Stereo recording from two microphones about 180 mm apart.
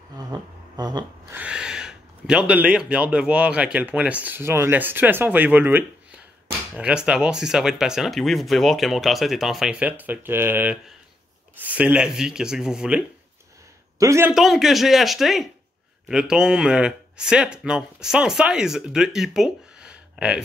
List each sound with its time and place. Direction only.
0.3 s a sound: 20° right (ahead or behind)
1.3 s speech: 5° right (ahead or behind)
13.9 s a man's voice: 15° right (ahead or behind)
14.3 s speech: centre (ahead or behind)